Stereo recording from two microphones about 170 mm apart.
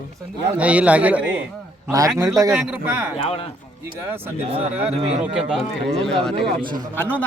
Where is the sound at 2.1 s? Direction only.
20° right (ahead or behind).